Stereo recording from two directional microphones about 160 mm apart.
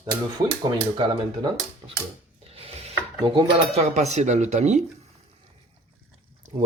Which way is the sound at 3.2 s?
30° right (ahead or behind).